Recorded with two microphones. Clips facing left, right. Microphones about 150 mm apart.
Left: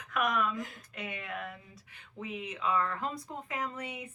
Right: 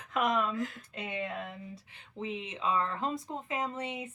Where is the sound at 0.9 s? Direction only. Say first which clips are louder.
Right 3 dB; 25° right (ahead or behind).